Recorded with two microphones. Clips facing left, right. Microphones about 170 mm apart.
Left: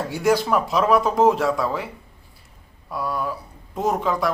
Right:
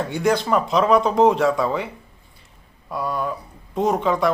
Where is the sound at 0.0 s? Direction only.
5° left (ahead or behind).